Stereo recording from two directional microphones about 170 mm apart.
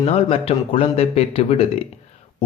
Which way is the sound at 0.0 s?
35° left (ahead or behind).